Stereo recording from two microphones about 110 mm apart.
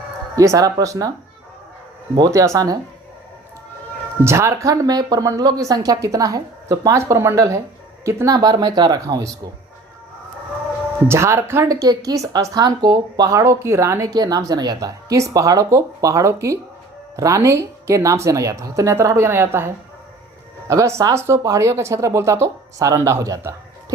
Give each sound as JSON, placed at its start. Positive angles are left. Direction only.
{"t": 0.3, "sound": "a woman's voice", "side_deg": -30}
{"t": 2.1, "sound": "a woman's voice", "side_deg": -30}
{"t": 4.2, "sound": "a woman's voice", "side_deg": -25}
{"t": 11.1, "sound": "a woman's voice", "side_deg": -25}